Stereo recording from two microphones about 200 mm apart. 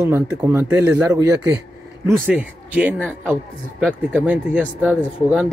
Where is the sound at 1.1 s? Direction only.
20° right (ahead or behind).